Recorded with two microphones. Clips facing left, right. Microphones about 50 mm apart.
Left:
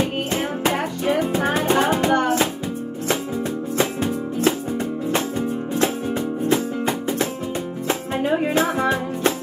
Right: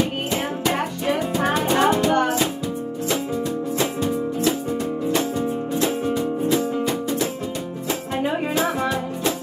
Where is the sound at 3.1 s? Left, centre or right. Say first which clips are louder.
Left 1 dB; left.